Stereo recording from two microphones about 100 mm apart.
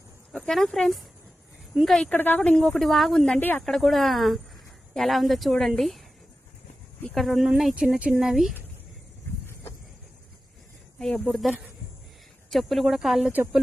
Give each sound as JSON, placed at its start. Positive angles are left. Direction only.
{"t": 0.3, "sound": "speech", "side_deg": 5}
{"t": 2.1, "sound": "speech", "side_deg": 20}
{"t": 7.1, "sound": "speech", "side_deg": 0}
{"t": 11.0, "sound": "speech", "side_deg": 5}